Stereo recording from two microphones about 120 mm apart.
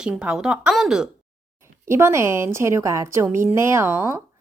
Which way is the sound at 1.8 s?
20° right (ahead or behind).